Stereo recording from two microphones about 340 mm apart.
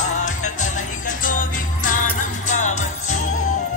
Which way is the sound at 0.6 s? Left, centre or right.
Left.